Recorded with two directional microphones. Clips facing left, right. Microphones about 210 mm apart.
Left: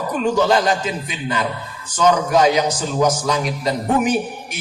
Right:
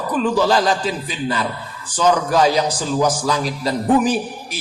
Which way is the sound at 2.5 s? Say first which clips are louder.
Even; 35° right (ahead or behind).